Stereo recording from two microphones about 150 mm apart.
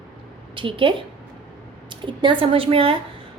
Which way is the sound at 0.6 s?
35° right (ahead or behind).